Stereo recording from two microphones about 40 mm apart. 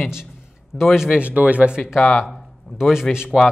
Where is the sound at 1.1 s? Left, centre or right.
Right.